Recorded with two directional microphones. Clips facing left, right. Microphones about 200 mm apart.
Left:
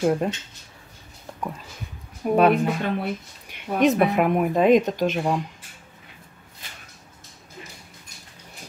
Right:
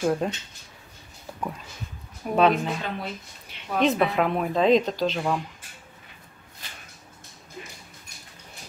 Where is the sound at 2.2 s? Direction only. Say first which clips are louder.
Left 3 dB; 50° left (ahead or behind).